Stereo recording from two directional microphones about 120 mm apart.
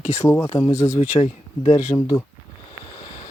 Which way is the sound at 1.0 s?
60° left (ahead or behind).